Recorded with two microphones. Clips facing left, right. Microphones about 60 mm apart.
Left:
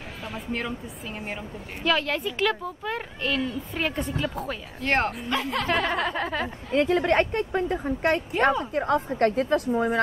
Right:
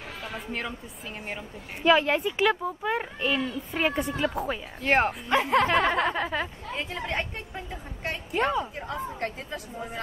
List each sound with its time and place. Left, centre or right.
0.5 s speech: centre
1.8 s speech: centre
5.3 s speech: right
5.7 s speech: centre
6.1 s speech: centre
6.7 s speech: left